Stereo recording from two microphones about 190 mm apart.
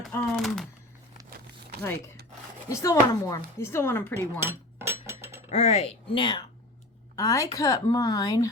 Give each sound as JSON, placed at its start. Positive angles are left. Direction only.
{"t": 0.1, "sound": "speech", "side_deg": 0}
{"t": 2.6, "sound": "speech", "side_deg": 15}
{"t": 4.4, "sound": "a sound", "side_deg": -15}
{"t": 5.5, "sound": "speech", "side_deg": 35}